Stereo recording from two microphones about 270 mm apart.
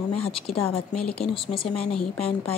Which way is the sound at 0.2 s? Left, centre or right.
Left.